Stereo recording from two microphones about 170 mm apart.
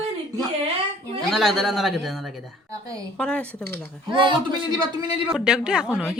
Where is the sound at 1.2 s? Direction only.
Centre (ahead or behind).